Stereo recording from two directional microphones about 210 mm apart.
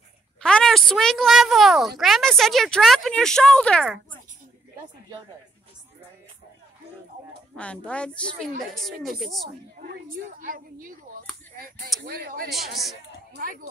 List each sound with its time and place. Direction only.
0.4 s speech: 5° left (ahead or behind)
7.5 s speech: 5° left (ahead or behind)
9.8 s a woman's voice: 40° right (ahead or behind)
12.0 s speech: 45° right (ahead or behind)
12.4 s speech: centre (ahead or behind)